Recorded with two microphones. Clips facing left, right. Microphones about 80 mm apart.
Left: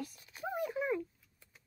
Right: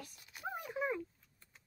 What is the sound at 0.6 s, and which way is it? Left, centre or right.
Speech, centre.